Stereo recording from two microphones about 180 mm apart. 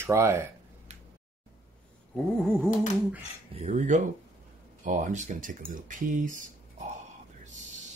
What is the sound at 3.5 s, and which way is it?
Speech, 40° right (ahead or behind).